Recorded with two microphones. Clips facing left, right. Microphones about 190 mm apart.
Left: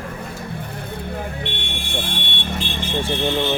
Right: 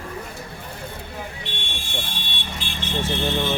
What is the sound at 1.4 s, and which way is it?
Vehicle, 60° left (ahead or behind).